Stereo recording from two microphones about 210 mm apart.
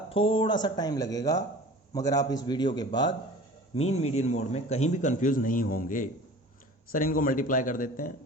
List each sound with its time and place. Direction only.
0.1 s speech: 25° left (ahead or behind)
3.8 s a man's voice: 30° left (ahead or behind)